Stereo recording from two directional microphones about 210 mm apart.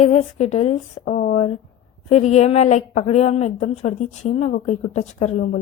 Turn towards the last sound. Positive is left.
turn(degrees=40)  # may be behind; listen again after turning